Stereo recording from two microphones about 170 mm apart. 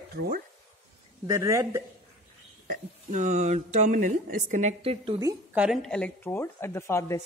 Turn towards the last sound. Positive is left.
turn(degrees=15)  # may be behind; listen again after turning